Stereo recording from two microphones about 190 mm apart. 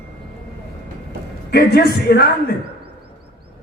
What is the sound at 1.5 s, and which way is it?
Speech, 55° left (ahead or behind).